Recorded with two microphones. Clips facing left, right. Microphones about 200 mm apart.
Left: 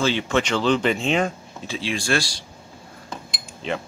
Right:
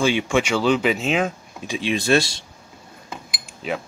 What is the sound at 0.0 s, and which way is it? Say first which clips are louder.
Speech: right 2 dB; 10° right (ahead or behind).